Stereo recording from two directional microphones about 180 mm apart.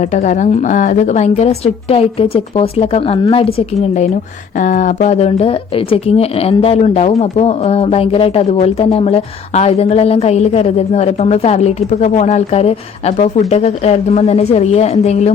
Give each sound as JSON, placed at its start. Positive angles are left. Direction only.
{"t": 0.0, "sound": "speech", "side_deg": 40}